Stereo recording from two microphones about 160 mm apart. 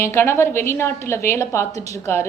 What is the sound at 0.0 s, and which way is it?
A woman's voice, 15° left (ahead or behind).